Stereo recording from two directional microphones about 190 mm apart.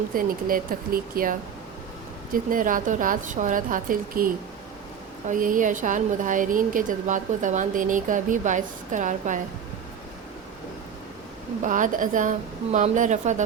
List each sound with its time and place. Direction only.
0.1 s a woman's voice: 50° right (ahead or behind)
5.3 s a woman's voice: 45° right (ahead or behind)
11.6 s a woman's voice: 45° right (ahead or behind)